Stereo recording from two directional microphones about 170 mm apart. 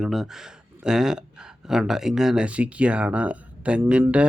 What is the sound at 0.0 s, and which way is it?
Speech, centre (ahead or behind).